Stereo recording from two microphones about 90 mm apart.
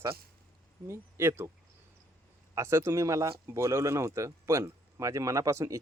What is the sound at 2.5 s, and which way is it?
Speech, 30° right (ahead or behind).